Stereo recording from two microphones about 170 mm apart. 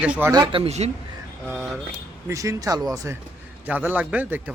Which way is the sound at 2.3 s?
20° right (ahead or behind).